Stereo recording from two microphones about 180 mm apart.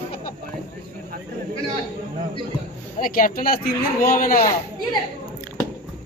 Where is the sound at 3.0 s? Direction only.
50° left (ahead or behind).